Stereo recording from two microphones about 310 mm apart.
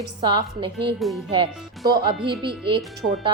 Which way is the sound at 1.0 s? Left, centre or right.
Centre.